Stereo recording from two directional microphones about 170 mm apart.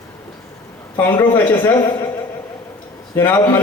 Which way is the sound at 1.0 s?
15° left (ahead or behind).